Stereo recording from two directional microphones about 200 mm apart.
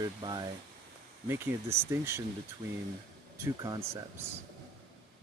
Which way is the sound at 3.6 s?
15° right (ahead or behind).